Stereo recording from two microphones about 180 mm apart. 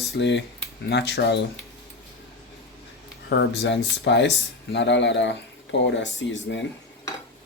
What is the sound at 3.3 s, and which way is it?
Speech, 75° left (ahead or behind).